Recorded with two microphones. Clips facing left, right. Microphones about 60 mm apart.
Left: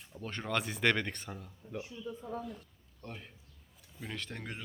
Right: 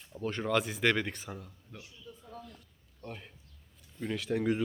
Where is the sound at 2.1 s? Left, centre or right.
Left.